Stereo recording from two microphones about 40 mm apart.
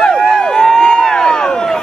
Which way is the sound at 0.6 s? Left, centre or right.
Centre.